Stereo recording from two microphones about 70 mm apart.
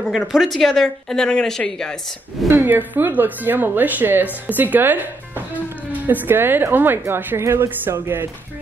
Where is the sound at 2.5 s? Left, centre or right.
Right.